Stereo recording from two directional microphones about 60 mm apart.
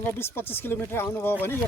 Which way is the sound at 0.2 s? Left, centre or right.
Left.